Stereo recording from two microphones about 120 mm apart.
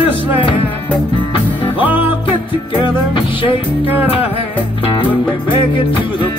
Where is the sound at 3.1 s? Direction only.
45° left (ahead or behind).